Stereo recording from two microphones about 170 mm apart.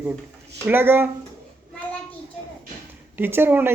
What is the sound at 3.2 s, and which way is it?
Speech, 15° right (ahead or behind).